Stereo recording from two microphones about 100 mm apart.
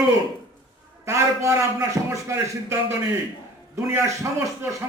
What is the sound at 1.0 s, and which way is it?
A man's voice, 30° right (ahead or behind).